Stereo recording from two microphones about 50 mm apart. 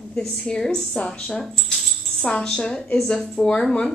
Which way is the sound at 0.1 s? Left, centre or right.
Centre.